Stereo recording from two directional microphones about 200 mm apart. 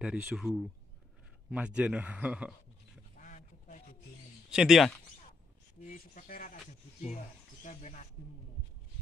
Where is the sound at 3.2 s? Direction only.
40° left (ahead or behind).